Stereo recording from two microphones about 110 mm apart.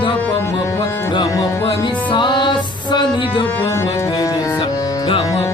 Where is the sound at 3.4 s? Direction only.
20° left (ahead or behind).